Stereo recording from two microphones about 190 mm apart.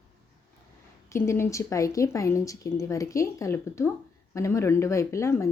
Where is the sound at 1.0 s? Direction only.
15° left (ahead or behind).